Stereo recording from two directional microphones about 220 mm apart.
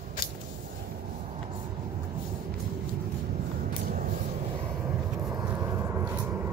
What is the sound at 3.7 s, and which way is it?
Vehicle, 40° right (ahead or behind).